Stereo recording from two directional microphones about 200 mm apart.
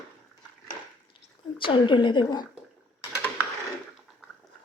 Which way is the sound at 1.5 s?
25° left (ahead or behind).